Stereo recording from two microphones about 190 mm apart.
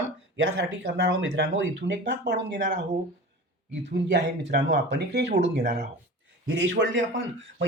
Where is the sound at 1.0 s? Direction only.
75° right (ahead or behind).